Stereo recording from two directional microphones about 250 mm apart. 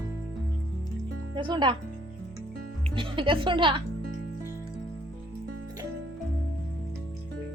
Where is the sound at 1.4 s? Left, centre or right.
Centre.